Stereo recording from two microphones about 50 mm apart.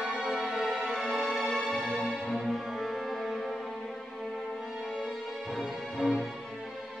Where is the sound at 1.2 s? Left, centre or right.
Centre.